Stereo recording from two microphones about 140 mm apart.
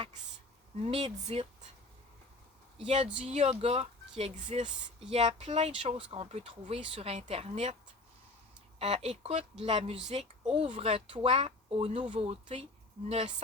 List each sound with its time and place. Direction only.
0.8 s speech: 45° right (ahead or behind)
2.7 s speech: 45° right (ahead or behind)
4.2 s speech: 55° right (ahead or behind)
8.8 s speech: 50° right (ahead or behind)